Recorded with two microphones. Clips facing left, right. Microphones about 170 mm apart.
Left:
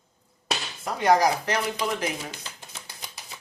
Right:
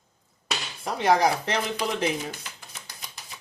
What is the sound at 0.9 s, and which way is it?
Speech, 30° right (ahead or behind).